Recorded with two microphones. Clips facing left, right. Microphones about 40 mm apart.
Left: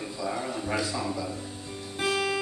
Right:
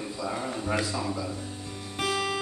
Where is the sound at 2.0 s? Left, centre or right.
Left.